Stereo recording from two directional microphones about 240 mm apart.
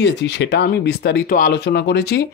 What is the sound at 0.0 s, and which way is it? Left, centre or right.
Speech, left.